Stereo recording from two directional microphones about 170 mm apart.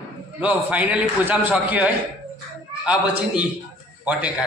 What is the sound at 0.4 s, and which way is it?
A man's voice, 10° right (ahead or behind).